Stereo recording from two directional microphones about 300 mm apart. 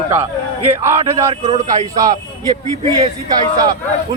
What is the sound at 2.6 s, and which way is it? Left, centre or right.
Speech, right.